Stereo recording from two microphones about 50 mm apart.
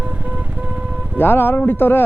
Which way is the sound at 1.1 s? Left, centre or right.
Left.